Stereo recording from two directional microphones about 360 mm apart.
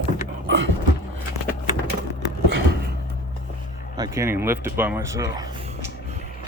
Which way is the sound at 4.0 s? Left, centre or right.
Centre.